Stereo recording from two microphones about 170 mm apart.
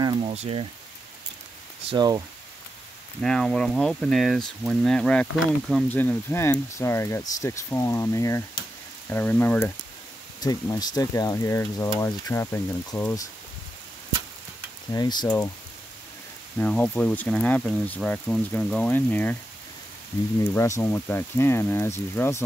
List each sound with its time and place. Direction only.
0.0 s a sound: 25° right (ahead or behind)
0.3 s speech: 35° right (ahead or behind)
1.9 s speech: 25° right (ahead or behind)
3.2 s speech: 5° left (ahead or behind)
5.9 s speech: 10° left (ahead or behind)
10.4 s speech: 20° left (ahead or behind)
14.9 s speech: 25° left (ahead or behind)
16.5 s speech: 10° left (ahead or behind)
20.5 s speech: 15° left (ahead or behind)